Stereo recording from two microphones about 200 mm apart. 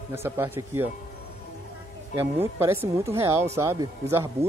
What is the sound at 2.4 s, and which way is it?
Speech, 10° right (ahead or behind).